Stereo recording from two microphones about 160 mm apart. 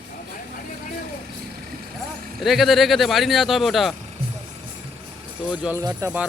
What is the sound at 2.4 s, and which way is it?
Speech, centre (ahead or behind).